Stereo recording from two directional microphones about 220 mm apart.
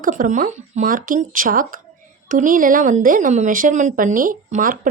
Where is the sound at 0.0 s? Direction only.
35° right (ahead or behind).